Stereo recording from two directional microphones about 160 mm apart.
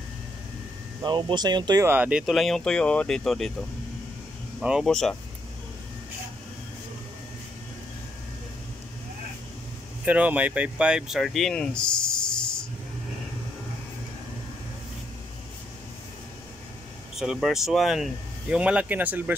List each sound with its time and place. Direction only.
1.0 s speech: 30° right (ahead or behind)
1.9 s speech: 10° right (ahead or behind)
4.6 s speech: 5° right (ahead or behind)
10.0 s speech: 10° right (ahead or behind)
17.2 s speech: centre (ahead or behind)